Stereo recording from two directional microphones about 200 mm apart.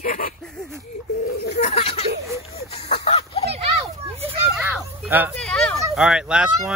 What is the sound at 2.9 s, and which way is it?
Music, 30° left (ahead or behind).